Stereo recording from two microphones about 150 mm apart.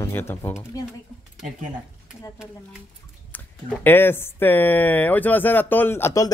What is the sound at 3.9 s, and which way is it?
Speech, 15° left (ahead or behind).